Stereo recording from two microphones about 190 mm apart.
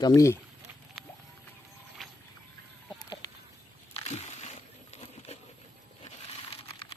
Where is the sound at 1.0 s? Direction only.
Centre (ahead or behind).